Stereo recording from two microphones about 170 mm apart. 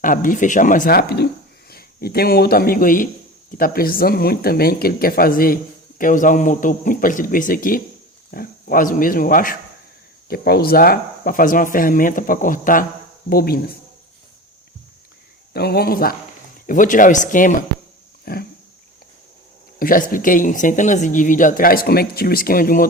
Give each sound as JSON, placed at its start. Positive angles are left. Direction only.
{"t": 0.0, "sound": "speech", "side_deg": 50}
{"t": 10.2, "sound": "speech", "side_deg": 65}
{"t": 13.3, "sound": "speech", "side_deg": 65}
{"t": 15.5, "sound": "speech", "side_deg": 65}
{"t": 18.3, "sound": "speech", "side_deg": 60}
{"t": 19.8, "sound": "speech", "side_deg": 55}